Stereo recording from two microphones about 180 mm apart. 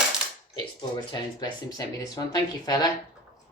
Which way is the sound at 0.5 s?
25° left (ahead or behind).